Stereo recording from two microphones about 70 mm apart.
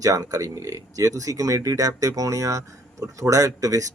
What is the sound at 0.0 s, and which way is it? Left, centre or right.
Speech, right.